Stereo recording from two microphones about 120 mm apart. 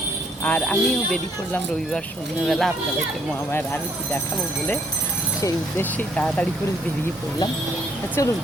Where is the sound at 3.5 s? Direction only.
15° left (ahead or behind).